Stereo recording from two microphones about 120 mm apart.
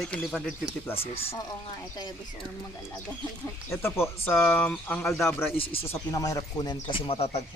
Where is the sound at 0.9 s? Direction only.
55° left (ahead or behind).